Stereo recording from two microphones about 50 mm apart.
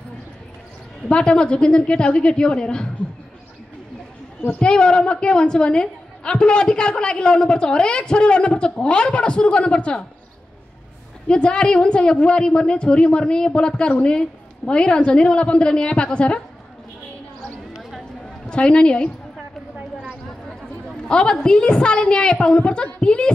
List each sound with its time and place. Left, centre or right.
1.0 s a woman's voice: left
4.6 s a woman's voice: left
11.2 s a woman's voice: centre
18.5 s a woman's voice: centre
21.1 s a woman's voice: centre